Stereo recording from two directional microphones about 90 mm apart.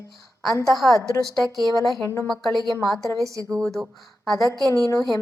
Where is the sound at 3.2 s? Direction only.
40° right (ahead or behind).